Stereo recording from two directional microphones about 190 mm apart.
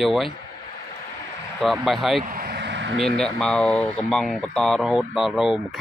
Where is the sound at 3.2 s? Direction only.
5° left (ahead or behind).